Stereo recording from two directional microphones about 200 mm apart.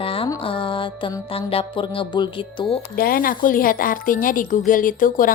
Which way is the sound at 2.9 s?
45° left (ahead or behind).